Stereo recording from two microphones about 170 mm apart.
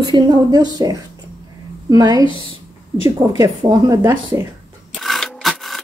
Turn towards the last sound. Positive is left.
turn(degrees=0)  # may be behind; listen again after turning